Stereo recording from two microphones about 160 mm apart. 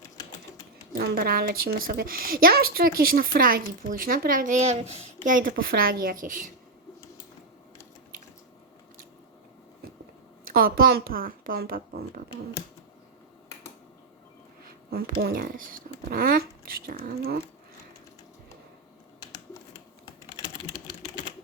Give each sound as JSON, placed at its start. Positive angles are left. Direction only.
{"t": 0.9, "sound": "a woman's voice", "side_deg": -70}
{"t": 10.5, "sound": "speech", "side_deg": -70}
{"t": 14.6, "sound": "a woman's voice", "side_deg": -70}
{"t": 19.2, "sound": "typing", "side_deg": 25}